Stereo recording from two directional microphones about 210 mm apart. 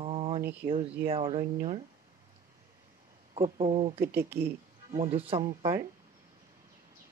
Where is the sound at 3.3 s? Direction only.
25° right (ahead or behind).